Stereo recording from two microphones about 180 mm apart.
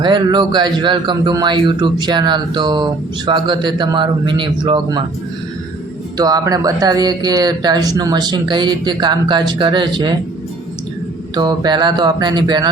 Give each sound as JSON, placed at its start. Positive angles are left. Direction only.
{"t": 0.0, "sound": "speech", "side_deg": -25}
{"t": 6.1, "sound": "speech", "side_deg": -20}
{"t": 11.3, "sound": "speech", "side_deg": -25}